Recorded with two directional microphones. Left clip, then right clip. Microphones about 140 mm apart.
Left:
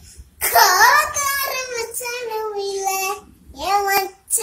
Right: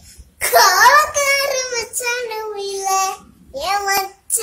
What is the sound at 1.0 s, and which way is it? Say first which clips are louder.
Child singing: right 5 dB; 20° right (ahead or behind).